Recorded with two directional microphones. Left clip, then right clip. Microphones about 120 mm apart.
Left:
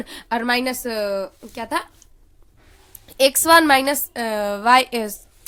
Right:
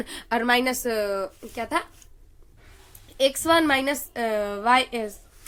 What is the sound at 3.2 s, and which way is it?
A woman's voice, 70° left (ahead or behind).